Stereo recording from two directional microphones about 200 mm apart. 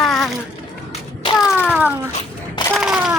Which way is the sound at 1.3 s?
Centre (ahead or behind).